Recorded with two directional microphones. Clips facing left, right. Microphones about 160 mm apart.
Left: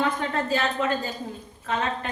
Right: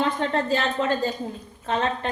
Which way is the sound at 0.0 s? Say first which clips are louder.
Right 2 dB; 35° right (ahead or behind).